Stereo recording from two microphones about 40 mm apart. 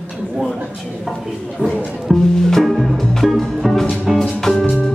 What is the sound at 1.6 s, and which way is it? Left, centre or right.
Speech, left.